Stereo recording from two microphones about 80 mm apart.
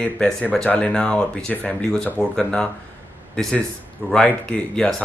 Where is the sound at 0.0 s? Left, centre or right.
Centre.